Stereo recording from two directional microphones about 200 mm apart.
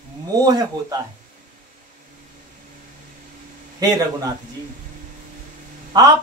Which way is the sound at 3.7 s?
20° right (ahead or behind).